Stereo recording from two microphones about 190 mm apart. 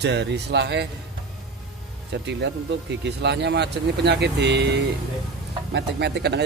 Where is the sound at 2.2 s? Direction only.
65° right (ahead or behind).